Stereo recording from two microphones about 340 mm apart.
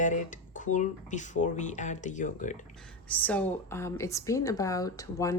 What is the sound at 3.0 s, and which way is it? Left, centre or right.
A woman's voice, centre.